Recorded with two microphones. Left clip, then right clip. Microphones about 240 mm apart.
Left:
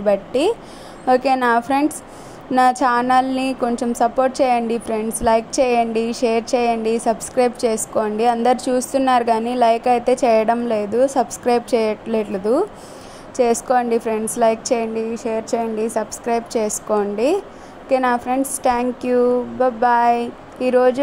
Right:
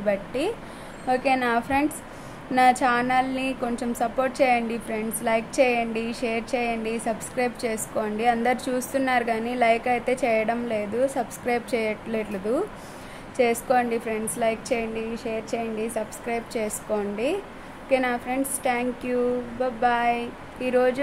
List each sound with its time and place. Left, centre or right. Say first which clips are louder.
0.0 s a woman's voice: left 8 dB; left